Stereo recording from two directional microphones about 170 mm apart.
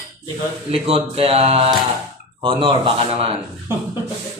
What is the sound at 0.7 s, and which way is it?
Speech, 35° right (ahead or behind).